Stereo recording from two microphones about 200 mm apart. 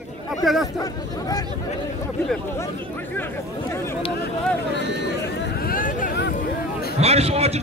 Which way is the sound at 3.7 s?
15° left (ahead or behind).